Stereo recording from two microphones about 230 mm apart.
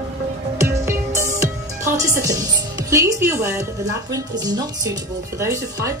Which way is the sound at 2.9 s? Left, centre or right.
Centre.